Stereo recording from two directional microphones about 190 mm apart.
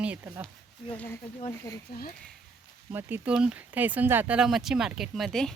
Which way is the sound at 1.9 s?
55° left (ahead or behind).